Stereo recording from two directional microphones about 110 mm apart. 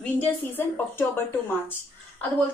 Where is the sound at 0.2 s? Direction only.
20° left (ahead or behind).